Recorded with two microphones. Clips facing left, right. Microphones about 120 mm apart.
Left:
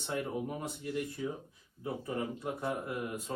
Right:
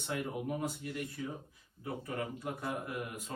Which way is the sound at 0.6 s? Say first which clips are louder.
Left 1 dB; 25° left (ahead or behind).